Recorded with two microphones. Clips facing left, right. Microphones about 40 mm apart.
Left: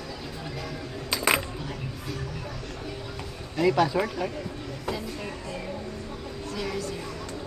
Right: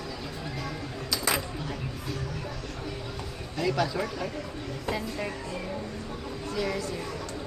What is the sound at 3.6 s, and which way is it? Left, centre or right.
Speech, centre.